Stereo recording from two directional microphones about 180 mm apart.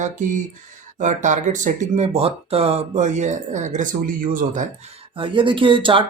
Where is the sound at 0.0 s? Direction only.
45° right (ahead or behind).